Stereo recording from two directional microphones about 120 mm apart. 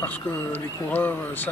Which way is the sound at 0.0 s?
15° left (ahead or behind).